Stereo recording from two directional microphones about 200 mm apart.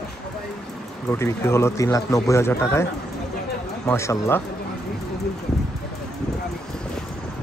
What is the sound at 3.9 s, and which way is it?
Speech, 15° left (ahead or behind).